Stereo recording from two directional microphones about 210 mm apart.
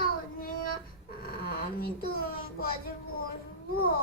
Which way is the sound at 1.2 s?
45° left (ahead or behind).